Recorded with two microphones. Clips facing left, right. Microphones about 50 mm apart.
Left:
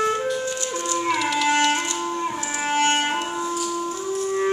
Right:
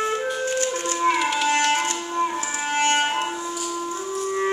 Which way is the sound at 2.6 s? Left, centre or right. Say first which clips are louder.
Left 2 dB; centre.